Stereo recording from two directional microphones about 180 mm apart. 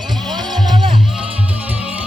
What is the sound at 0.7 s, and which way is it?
Music, 25° right (ahead or behind).